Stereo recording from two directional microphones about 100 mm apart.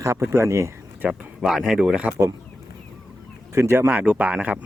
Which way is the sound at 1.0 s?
5° right (ahead or behind).